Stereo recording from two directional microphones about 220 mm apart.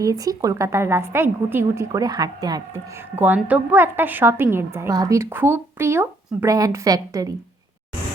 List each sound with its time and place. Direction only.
0.0 s a woman's voice: 15° right (ahead or behind)